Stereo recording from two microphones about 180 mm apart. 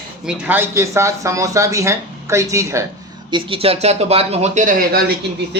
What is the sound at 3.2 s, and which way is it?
Speech, 30° right (ahead or behind).